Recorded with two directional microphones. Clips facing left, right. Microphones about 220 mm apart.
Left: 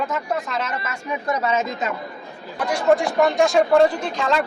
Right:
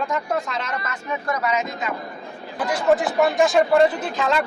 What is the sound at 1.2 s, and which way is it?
Speech, 25° left (ahead or behind).